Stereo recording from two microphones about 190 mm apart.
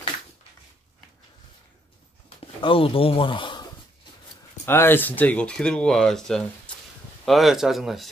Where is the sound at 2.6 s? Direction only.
30° left (ahead or behind).